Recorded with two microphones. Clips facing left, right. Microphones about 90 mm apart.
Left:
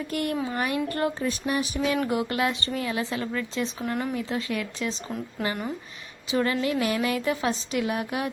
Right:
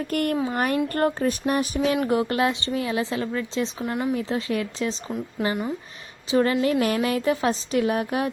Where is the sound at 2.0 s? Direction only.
35° right (ahead or behind).